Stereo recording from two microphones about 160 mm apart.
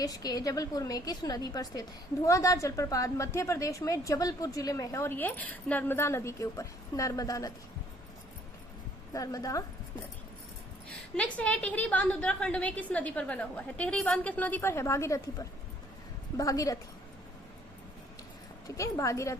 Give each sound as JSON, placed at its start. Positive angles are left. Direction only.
{"t": 0.0, "sound": "a woman's voice", "side_deg": 25}
{"t": 9.1, "sound": "speech", "side_deg": 20}
{"t": 11.2, "sound": "a woman's voice", "side_deg": 10}
{"t": 18.8, "sound": "a woman's voice", "side_deg": 20}